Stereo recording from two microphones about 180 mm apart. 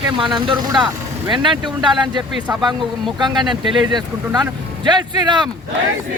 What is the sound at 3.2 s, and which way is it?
Speech, 25° right (ahead or behind).